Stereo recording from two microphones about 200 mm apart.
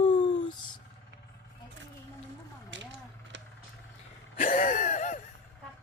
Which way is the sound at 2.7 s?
65° right (ahead or behind).